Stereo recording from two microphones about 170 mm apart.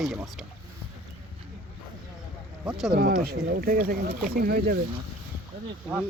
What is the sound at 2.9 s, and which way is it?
Speech, 60° right (ahead or behind).